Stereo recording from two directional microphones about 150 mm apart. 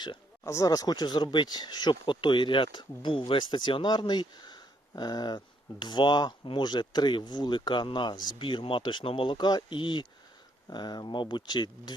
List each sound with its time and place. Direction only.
0.4 s speech: 20° left (ahead or behind)